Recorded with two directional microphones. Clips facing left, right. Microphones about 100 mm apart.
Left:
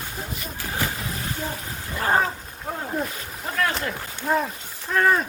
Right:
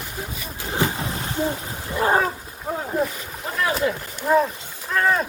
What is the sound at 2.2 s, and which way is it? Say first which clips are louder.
Wild animals: right 1 dB; 5° right (ahead or behind).